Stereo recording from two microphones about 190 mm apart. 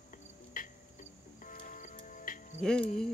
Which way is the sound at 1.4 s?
40° left (ahead or behind).